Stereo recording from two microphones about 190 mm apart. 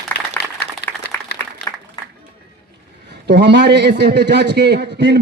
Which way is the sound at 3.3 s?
65° right (ahead or behind).